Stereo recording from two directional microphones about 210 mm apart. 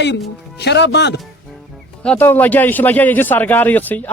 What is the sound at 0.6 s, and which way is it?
Speech, 55° left (ahead or behind).